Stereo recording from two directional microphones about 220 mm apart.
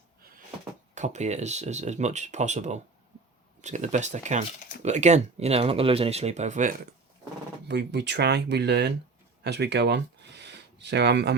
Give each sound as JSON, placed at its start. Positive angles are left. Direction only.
{"t": 0.9, "sound": "speech", "side_deg": -30}
{"t": 7.7, "sound": "speech", "side_deg": -50}